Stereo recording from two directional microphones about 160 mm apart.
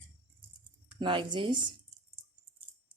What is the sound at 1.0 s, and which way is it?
Speech, 30° right (ahead or behind).